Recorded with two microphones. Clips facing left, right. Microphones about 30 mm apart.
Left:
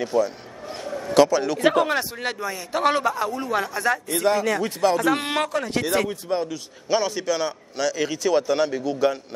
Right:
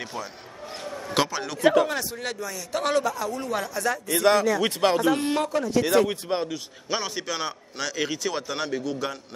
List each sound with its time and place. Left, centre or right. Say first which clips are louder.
0.0 s a man's voice: left 12 dB; centre
0.7 s a sound: left 5 dB; centre
1.1 s a man's voice: left 8 dB; centre
1.6 s speech: right 1 dB; left
1.9 s a man's voice: left 5 dB; left
3.0 s speech: left 3 dB; left
3.3 s a man's voice: left 4 dB; centre
4.1 s speech: right 4 dB; right
5.0 s speech: left 1 dB; left
6.2 s speech: left 2 dB; centre
6.9 s a man's voice: left 6 dB; centre